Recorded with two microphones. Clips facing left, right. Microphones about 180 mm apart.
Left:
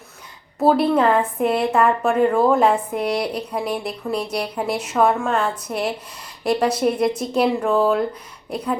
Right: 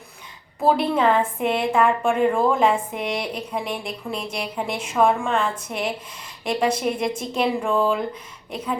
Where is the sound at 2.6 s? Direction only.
5° right (ahead or behind).